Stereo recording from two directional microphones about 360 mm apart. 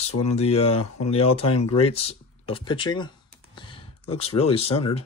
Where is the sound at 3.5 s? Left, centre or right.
Centre.